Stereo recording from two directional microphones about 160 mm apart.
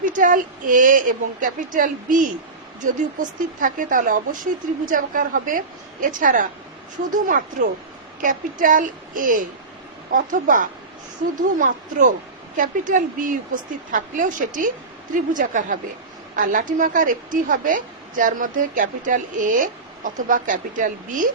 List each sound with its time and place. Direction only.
0.0 s a woman's voice: 55° right (ahead or behind)